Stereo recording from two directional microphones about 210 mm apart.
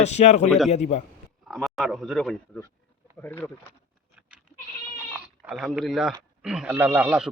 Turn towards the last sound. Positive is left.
turn(degrees=-5)  # may be behind; listen again after turning